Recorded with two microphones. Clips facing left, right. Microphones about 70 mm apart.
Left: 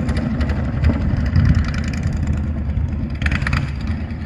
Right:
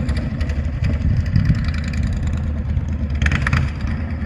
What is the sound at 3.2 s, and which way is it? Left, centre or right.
Vehicle, centre.